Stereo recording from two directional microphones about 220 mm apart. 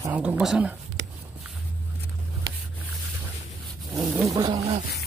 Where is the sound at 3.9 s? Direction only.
15° right (ahead or behind).